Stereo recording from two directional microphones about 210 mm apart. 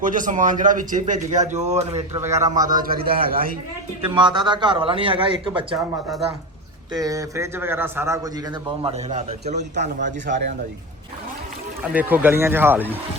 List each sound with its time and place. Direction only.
0.0 s a man's voice: 40° right (ahead or behind)
2.2 s a man's voice: 15° right (ahead or behind)
2.8 s a man's voice: 45° right (ahead or behind)
4.1 s a man's voice: 20° right (ahead or behind)
6.9 s a man's voice: 15° right (ahead or behind); by 9.9 s 35° right (ahead or behind)
10.0 s a man's voice: 55° right (ahead or behind)
11.8 s a man's voice: 5° right (ahead or behind)